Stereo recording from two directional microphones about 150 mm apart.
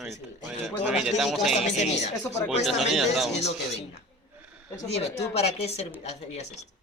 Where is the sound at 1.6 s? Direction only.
50° left (ahead or behind).